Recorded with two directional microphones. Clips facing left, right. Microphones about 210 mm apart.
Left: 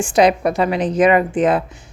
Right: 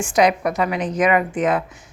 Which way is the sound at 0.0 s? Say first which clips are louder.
Left 3 dB; 30° left (ahead or behind).